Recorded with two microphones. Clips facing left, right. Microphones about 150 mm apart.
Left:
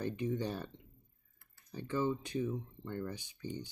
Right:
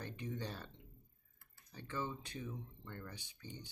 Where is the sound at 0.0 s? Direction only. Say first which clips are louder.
Left 9 dB; 15° left (ahead or behind).